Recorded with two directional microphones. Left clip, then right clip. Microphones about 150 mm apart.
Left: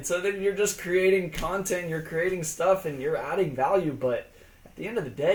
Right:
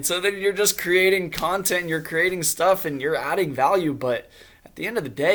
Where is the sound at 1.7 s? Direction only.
35° right (ahead or behind).